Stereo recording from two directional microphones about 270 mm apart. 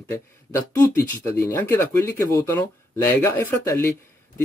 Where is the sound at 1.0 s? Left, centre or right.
Centre.